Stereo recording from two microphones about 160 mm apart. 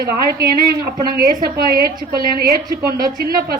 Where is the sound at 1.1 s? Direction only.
75° right (ahead or behind).